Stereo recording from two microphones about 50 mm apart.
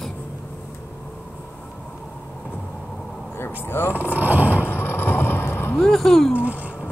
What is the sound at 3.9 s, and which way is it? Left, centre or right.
Speech, right.